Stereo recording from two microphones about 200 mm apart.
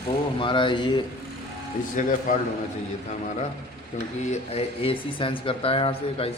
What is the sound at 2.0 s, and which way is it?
Speech, 40° left (ahead or behind).